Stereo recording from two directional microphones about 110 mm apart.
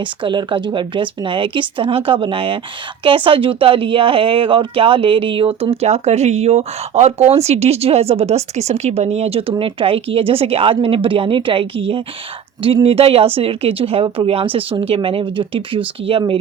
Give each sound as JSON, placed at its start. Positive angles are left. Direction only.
{"t": 0.0, "sound": "speech", "side_deg": -45}